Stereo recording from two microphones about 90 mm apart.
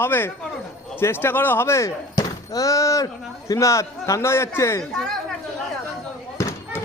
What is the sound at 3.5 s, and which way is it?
A man's voice, 35° left (ahead or behind).